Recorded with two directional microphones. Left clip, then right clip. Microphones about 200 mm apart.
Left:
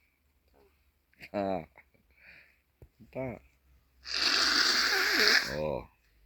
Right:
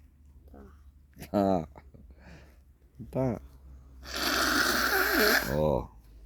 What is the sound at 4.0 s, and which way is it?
Snoring, 35° right (ahead or behind).